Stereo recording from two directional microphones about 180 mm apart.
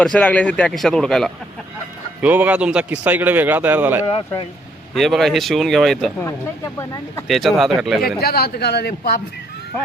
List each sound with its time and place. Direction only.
0.0 s a man's voice: 5° left (ahead or behind)
2.2 s speech: 10° right (ahead or behind)
4.9 s a man's voice: centre (ahead or behind)
6.7 s speech: 15° left (ahead or behind)
7.3 s a man's voice: centre (ahead or behind)
8.2 s speech: 60° left (ahead or behind)